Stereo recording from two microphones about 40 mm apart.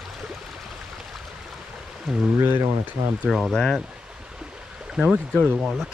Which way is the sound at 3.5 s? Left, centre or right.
Centre.